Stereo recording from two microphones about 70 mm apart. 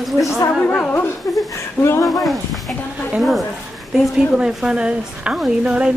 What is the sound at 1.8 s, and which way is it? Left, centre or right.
Speech, left.